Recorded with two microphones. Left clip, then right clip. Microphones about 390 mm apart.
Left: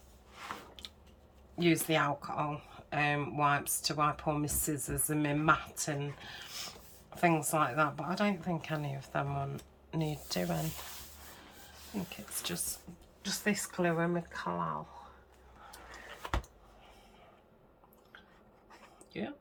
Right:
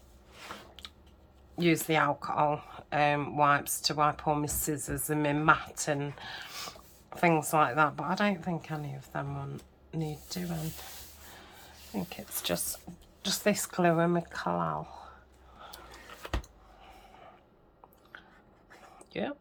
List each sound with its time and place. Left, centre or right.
1.5 s speech: centre
12.0 s speech: centre
19.1 s speech: centre